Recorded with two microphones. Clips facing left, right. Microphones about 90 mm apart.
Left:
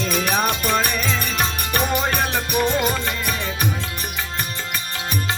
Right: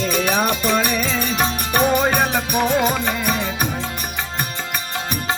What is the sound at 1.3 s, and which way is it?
Music, 15° right (ahead or behind).